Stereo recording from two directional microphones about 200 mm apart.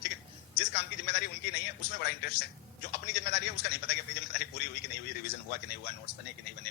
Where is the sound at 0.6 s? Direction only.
55° left (ahead or behind).